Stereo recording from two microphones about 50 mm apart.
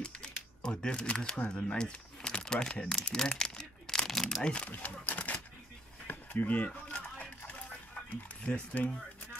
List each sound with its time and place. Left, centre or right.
0.0 s speech: centre
4.5 s speech: left
6.0 s a sound: left
8.5 s speech: left